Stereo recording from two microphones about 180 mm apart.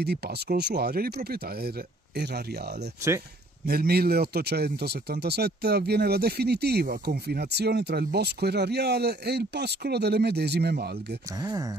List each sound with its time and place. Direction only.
0.0 s speech: 65° right (ahead or behind)
3.6 s speech: 60° right (ahead or behind)